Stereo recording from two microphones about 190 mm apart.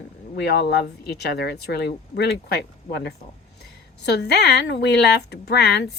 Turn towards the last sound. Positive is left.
turn(degrees=60)  # may be behind; listen again after turning